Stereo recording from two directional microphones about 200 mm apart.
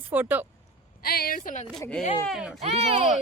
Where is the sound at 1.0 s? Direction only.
50° left (ahead or behind).